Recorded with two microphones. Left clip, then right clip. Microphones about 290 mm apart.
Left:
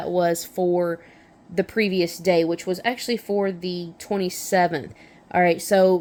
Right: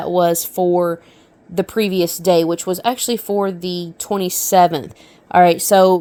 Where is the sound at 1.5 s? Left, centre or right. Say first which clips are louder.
Right 4 dB; right.